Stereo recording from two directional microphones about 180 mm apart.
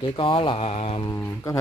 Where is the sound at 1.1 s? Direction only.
15° left (ahead or behind).